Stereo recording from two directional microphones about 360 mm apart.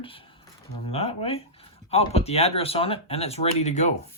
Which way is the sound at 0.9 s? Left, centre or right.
Centre.